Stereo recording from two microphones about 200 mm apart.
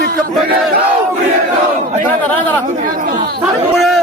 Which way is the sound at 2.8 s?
45° right (ahead or behind).